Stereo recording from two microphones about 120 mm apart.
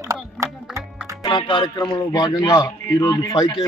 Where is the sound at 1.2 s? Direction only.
45° left (ahead or behind).